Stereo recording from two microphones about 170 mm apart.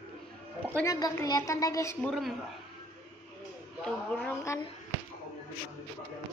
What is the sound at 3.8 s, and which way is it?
Speech, 5° left (ahead or behind).